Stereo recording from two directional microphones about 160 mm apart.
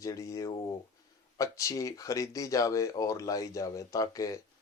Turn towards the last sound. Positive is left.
turn(degrees=20)  # may be behind; listen again after turning